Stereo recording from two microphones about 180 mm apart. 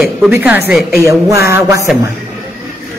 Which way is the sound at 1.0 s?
15° right (ahead or behind).